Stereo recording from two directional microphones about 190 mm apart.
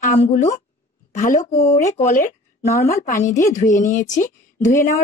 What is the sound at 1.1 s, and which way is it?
A woman's voice, 40° left (ahead or behind).